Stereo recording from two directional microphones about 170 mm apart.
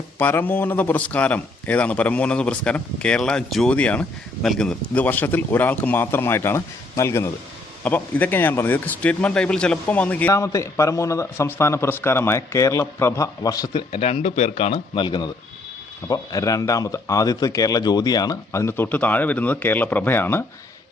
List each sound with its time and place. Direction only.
0.2 s a man's voice: 10° left (ahead or behind)
13.9 s speech: 35° left (ahead or behind); by 20.4 s 10° left (ahead or behind)